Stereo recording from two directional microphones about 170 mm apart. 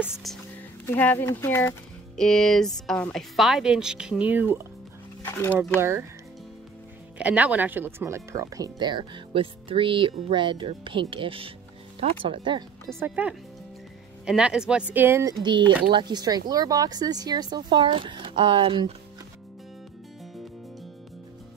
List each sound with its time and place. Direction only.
0.0 s speech: centre (ahead or behind)
0.8 s speech: 10° left (ahead or behind)
2.1 s speech: 5° left (ahead or behind)
5.3 s speech: 15° left (ahead or behind)
5.8 s speech: 15° right (ahead or behind)
7.2 s speech: 10° right (ahead or behind); by 12.9 s 25° right (ahead or behind)
13.0 s speech: 10° right (ahead or behind)
15.4 s speech: 30° right (ahead or behind)